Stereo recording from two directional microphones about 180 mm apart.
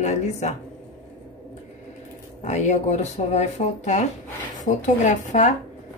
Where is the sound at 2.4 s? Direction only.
40° left (ahead or behind).